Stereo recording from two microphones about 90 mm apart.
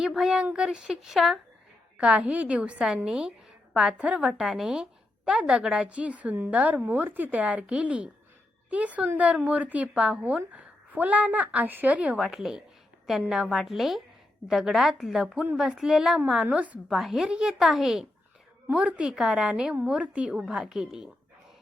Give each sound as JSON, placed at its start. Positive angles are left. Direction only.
{"t": 0.0, "sound": "a woman's voice", "side_deg": -5}
{"t": 2.0, "sound": "a woman's voice", "side_deg": -10}
{"t": 16.9, "sound": "a woman's voice", "side_deg": -5}